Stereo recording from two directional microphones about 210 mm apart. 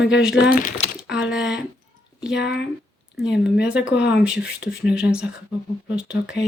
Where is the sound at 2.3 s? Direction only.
55° left (ahead or behind).